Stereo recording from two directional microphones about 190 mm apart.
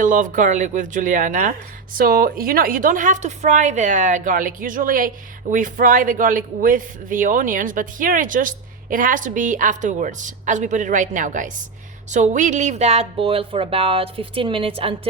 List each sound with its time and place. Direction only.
0.0 s speech: 45° right (ahead or behind); by 14.9 s 30° right (ahead or behind)